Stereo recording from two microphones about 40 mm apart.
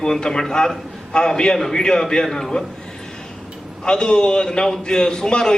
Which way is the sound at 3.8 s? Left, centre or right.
Left.